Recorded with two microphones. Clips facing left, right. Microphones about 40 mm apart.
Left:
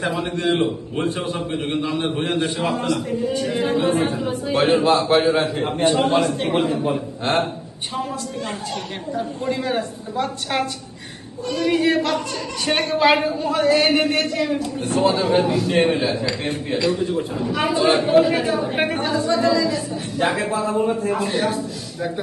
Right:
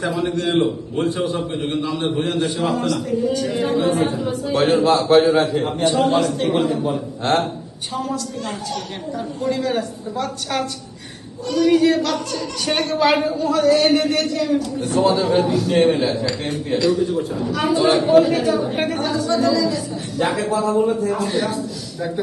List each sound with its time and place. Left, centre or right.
0.3 s a man's voice: left
1.4 s a man's voice: left
5.9 s a man's voice: left
7.9 s a man's voice: left
15.9 s a man's voice: centre; by 21.6 s left